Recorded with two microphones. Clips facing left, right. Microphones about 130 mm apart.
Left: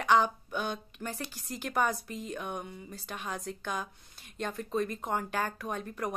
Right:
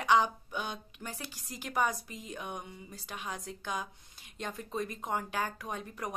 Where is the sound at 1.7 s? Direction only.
15° right (ahead or behind).